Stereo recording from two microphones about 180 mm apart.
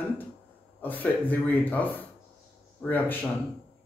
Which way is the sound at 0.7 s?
10° left (ahead or behind).